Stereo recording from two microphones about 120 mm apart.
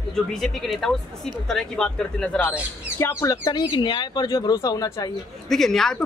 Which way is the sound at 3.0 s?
25° left (ahead or behind).